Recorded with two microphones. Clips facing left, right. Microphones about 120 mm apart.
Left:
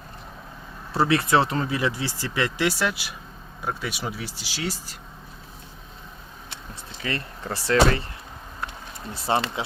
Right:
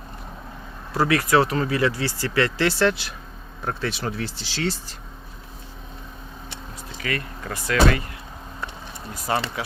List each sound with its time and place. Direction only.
0.9 s speech: 25° left (ahead or behind); by 4.9 s 10° left (ahead or behind)
7.0 s speech: 30° left (ahead or behind)
9.1 s speech: 25° left (ahead or behind)